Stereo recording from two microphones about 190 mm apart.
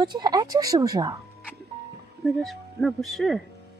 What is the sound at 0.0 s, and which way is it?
Speech, 20° right (ahead or behind).